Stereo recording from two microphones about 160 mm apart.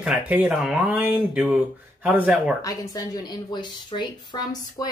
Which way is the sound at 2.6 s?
20° left (ahead or behind).